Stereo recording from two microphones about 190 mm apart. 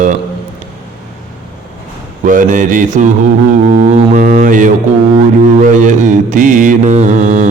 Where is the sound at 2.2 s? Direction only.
45° right (ahead or behind).